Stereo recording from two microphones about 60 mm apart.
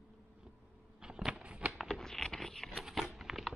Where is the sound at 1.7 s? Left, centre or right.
Centre.